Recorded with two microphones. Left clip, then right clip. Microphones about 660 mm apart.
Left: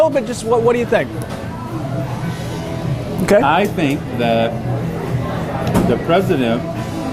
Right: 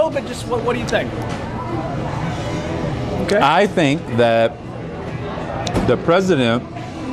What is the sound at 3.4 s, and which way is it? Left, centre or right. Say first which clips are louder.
Speech: right 1 dB; right.